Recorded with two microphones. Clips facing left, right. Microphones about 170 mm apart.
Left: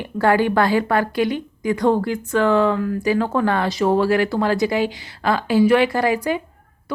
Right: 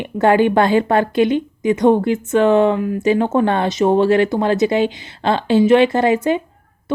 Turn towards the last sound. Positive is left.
turn(degrees=-25)  # may be behind; listen again after turning